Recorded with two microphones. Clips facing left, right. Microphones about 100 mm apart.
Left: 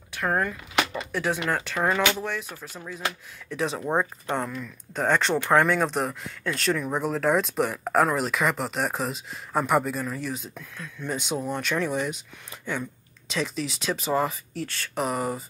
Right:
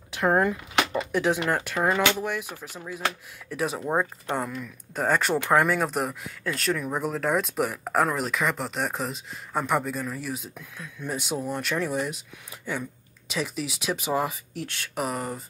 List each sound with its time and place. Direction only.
0.1 s speech: 15° right (ahead or behind)
15.0 s speech: centre (ahead or behind)